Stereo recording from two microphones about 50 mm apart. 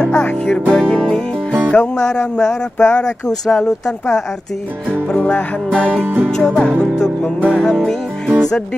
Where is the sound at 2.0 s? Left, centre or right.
Centre.